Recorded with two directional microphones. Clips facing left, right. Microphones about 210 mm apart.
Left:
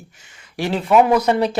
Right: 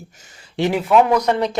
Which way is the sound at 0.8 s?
5° left (ahead or behind).